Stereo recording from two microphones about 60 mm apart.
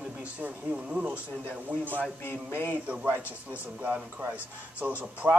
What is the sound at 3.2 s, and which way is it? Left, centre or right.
Music, left.